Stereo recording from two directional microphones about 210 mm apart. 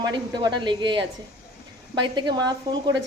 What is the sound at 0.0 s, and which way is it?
A woman's voice, 20° right (ahead or behind).